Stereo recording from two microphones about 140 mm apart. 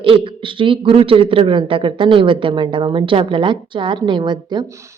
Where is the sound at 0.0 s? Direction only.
40° right (ahead or behind).